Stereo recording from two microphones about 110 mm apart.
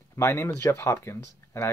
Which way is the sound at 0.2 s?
25° left (ahead or behind).